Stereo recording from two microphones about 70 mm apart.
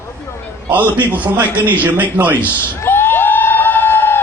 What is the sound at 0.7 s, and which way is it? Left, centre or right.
A man's voice, right.